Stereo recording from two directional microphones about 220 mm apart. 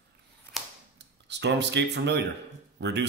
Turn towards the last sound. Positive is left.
turn(degrees=-50)  # may be behind; listen again after turning